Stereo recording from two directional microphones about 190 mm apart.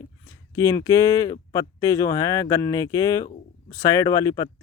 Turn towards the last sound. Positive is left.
turn(degrees=15)  # may be behind; listen again after turning